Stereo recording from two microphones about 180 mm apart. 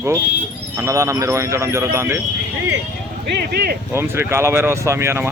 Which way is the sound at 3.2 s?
65° right (ahead or behind).